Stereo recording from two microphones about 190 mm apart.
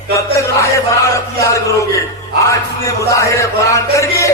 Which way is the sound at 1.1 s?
15° left (ahead or behind).